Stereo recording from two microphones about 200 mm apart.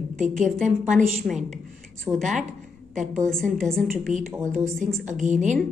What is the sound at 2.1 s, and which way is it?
Speech, 10° right (ahead or behind).